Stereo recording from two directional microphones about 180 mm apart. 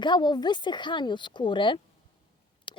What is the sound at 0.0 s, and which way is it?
Speech, 25° left (ahead or behind).